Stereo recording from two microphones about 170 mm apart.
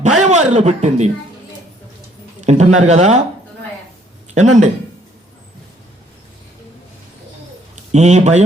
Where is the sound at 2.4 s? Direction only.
40° right (ahead or behind).